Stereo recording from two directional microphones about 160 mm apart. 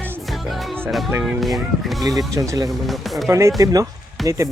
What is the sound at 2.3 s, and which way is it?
Speech, 20° right (ahead or behind).